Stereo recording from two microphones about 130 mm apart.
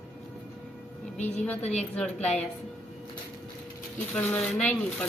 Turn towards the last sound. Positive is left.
turn(degrees=10)  # may be behind; listen again after turning